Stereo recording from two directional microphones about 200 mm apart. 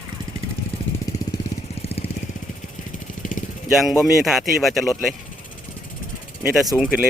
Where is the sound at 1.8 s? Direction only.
30° left (ahead or behind).